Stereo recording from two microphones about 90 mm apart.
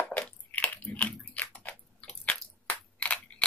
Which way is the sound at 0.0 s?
15° left (ahead or behind).